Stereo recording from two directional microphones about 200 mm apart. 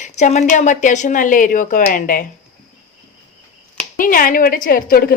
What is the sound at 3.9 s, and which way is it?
A woman's voice, 45° left (ahead or behind).